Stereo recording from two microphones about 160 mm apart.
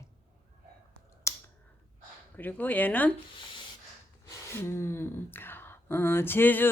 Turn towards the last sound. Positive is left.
turn(degrees=10)  # may be behind; listen again after turning